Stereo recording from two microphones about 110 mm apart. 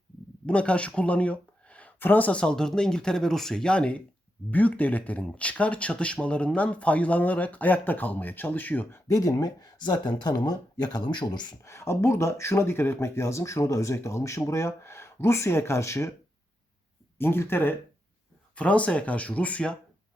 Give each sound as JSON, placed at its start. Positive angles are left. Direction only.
{"t": 0.4, "sound": "speech", "side_deg": 10}
{"t": 9.0, "sound": "speech", "side_deg": 30}
{"t": 11.6, "sound": "speech", "side_deg": 25}
{"t": 17.2, "sound": "speech", "side_deg": 20}